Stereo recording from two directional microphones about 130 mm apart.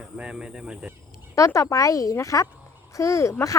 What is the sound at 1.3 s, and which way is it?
Speech, 25° left (ahead or behind).